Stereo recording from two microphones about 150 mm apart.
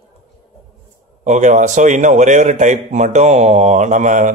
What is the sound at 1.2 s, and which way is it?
A man's voice, 55° right (ahead or behind).